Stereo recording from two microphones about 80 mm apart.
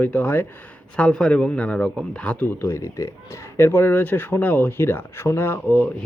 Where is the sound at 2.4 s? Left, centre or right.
Left.